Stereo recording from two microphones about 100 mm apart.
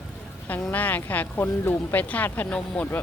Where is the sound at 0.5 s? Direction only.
15° left (ahead or behind).